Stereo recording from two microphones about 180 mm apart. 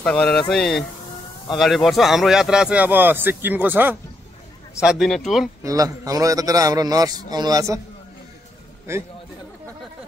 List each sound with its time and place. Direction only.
0.0 s speech: 5° left (ahead or behind)
5.6 s a man's voice: 20° right (ahead or behind)